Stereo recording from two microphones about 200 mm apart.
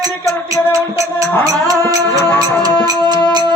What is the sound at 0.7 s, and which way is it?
Speech, 15° right (ahead or behind).